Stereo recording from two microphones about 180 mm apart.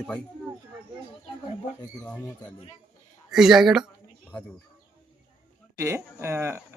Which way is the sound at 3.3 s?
5° right (ahead or behind).